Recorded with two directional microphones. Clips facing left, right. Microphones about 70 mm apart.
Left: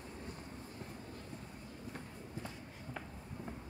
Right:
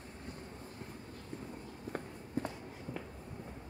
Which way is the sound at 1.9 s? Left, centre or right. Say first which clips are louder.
Right 7 dB; right.